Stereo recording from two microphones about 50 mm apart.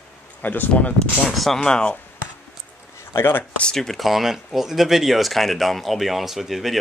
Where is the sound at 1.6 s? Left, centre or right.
Centre.